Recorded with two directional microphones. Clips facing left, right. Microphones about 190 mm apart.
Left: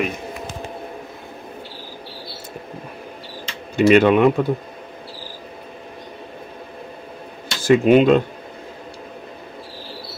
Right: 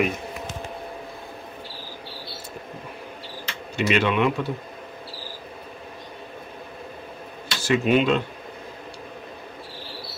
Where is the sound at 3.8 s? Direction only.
45° left (ahead or behind).